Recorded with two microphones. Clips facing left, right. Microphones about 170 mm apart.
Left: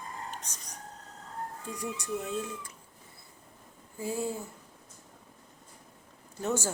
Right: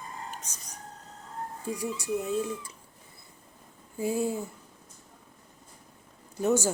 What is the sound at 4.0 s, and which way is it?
Speech, 15° right (ahead or behind).